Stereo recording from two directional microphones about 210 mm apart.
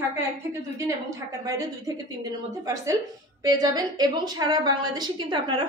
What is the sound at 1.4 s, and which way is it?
A woman's voice, 15° right (ahead or behind).